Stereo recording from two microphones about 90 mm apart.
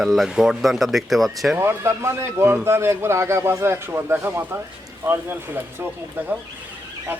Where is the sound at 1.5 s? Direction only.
30° right (ahead or behind).